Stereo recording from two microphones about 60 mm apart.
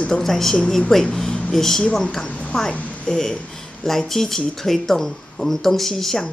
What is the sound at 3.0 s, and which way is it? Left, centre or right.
Speech, centre.